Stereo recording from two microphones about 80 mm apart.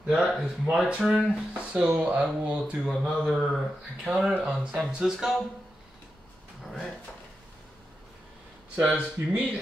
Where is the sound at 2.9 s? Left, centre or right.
Centre.